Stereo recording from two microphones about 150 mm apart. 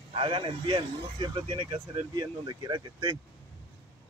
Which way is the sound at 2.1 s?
25° right (ahead or behind).